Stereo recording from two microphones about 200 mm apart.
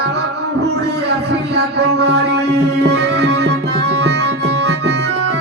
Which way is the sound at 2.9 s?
60° right (ahead or behind).